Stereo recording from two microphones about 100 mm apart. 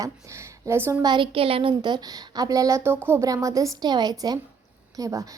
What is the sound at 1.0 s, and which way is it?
Speech, 55° right (ahead or behind).